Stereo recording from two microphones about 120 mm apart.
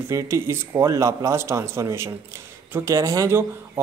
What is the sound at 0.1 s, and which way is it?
Speech, 20° right (ahead or behind).